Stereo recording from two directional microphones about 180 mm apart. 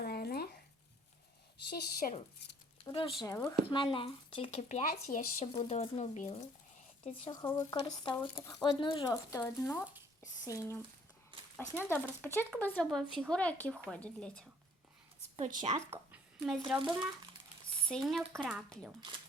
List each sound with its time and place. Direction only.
0.0 s a sound: 60° left (ahead or behind)
1.7 s speech: 55° left (ahead or behind)
2.7 s speech: 25° left (ahead or behind)
3.2 s speech: 15° left (ahead or behind)
3.7 s speech: 25° left (ahead or behind); by 5.5 s 45° left (ahead or behind)
5.5 s speech: 30° left (ahead or behind)
7.0 s speech: 30° left (ahead or behind); by 14.4 s 5° left (ahead or behind)
15.4 s a woman's voice: 45° right (ahead or behind)
16.5 s speech: centre (ahead or behind)